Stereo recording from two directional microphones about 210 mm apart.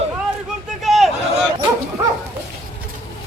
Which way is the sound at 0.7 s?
Centre (ahead or behind).